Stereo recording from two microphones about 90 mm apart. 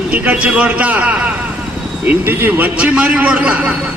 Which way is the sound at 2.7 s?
10° right (ahead or behind).